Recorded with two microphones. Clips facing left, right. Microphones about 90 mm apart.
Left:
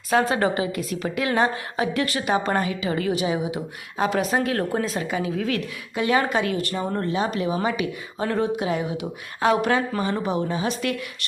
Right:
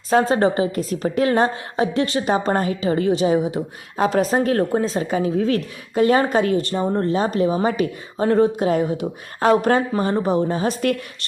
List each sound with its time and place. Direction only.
0.1 s a woman's voice: 30° right (ahead or behind)